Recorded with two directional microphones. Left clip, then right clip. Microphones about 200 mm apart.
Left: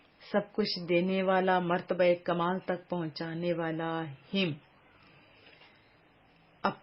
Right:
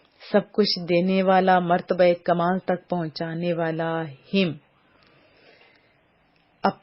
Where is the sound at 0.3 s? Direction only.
30° right (ahead or behind).